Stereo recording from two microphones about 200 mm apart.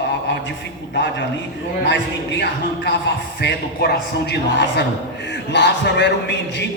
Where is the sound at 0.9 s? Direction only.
65° left (ahead or behind).